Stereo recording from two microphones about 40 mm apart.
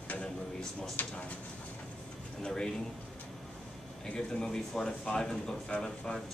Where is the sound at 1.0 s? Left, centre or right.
Left.